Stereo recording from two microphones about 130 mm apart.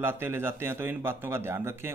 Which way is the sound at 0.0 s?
20° right (ahead or behind).